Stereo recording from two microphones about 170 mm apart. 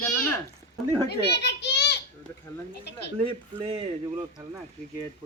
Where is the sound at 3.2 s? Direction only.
30° right (ahead or behind).